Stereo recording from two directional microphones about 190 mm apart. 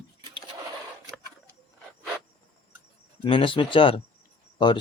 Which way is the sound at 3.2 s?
25° left (ahead or behind).